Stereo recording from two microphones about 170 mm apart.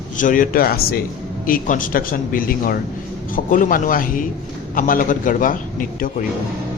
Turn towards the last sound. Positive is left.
turn(degrees=55)  # may be behind; listen again after turning